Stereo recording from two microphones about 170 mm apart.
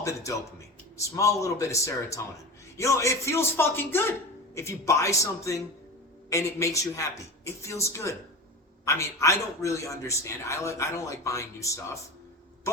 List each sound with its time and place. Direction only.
0.0 s a man's voice: 20° left (ahead or behind)